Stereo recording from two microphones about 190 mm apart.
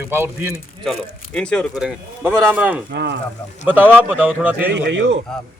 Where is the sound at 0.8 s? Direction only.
5° left (ahead or behind).